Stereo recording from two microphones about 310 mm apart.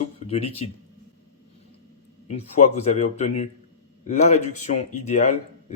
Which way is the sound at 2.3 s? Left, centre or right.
Left.